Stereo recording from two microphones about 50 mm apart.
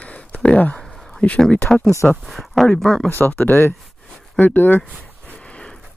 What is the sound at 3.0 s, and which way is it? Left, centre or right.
Speech, left.